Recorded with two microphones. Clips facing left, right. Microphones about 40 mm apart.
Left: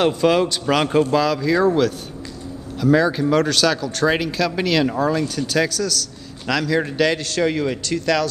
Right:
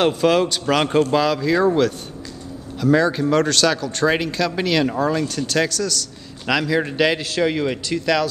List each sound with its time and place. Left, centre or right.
0.0 s a man's voice: centre